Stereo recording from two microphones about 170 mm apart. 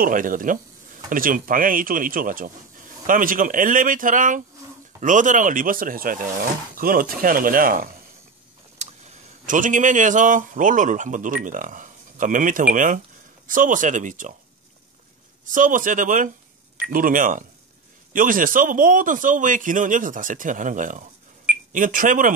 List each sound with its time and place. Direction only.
0.0 s a man's voice: 55° right (ahead or behind)
8.7 s a man's voice: 45° right (ahead or behind)
15.5 s a man's voice: 50° right (ahead or behind)